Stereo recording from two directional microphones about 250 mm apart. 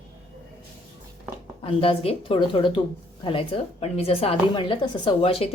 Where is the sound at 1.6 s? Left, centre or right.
Left.